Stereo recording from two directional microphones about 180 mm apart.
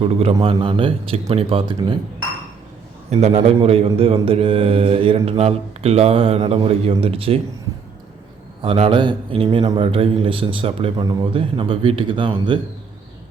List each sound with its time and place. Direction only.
0.0 s speech: 35° right (ahead or behind)
8.6 s a man's voice: 30° right (ahead or behind)